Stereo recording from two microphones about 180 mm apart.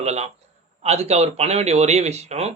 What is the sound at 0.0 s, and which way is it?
Speech, 40° right (ahead or behind).